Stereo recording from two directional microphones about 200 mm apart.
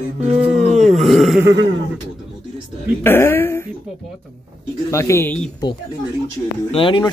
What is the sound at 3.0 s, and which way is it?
Speech, 10° left (ahead or behind).